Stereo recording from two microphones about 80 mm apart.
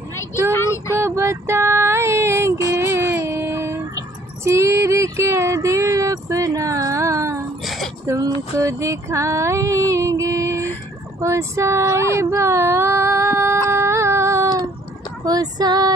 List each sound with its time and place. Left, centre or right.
0.5 s child singing: left
0.9 s music: right
2.7 s a sound: right
4.5 s female singing: right
8.1 s music: right
11.1 s a sound: right
15.2 s female singing: right